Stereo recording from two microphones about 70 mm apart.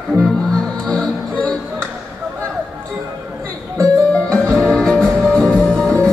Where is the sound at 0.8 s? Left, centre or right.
Centre.